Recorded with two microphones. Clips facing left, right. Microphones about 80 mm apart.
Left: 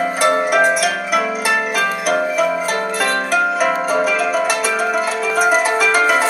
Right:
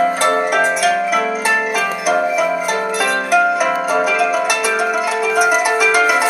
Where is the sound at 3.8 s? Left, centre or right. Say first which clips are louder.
Right 1 dB; centre.